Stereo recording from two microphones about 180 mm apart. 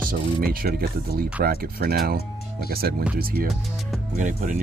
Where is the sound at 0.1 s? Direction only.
55° right (ahead or behind).